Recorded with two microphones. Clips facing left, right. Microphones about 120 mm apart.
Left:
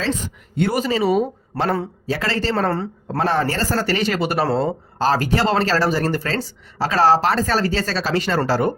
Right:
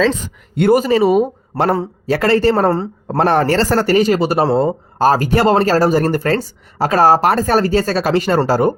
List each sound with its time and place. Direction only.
0.5 s a man's voice: 50° right (ahead or behind)
2.6 s a woman's voice: 40° right (ahead or behind)
3.2 s a man's voice: 60° right (ahead or behind)
3.8 s speech: 40° right (ahead or behind)